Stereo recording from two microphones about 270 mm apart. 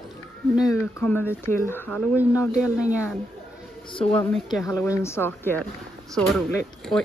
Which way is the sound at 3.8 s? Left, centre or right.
Centre.